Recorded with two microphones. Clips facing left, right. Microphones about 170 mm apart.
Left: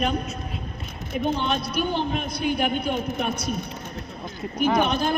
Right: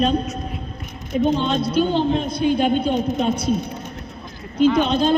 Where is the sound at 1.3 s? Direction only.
25° right (ahead or behind).